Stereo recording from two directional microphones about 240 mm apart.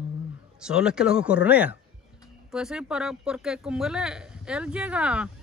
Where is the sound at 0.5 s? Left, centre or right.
Centre.